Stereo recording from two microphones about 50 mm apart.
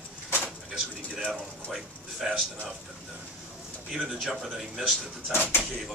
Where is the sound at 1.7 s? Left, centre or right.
Centre.